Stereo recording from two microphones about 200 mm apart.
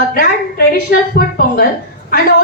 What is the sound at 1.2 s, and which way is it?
Speech, 50° left (ahead or behind).